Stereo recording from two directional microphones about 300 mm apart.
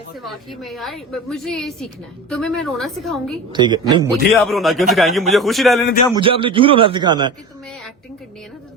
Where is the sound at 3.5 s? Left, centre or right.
Centre.